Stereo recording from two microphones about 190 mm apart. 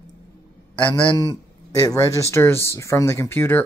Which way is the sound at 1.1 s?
20° left (ahead or behind).